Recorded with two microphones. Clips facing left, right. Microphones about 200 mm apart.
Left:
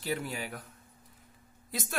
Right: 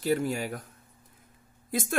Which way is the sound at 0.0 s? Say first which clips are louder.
Right 8 dB; 45° right (ahead or behind).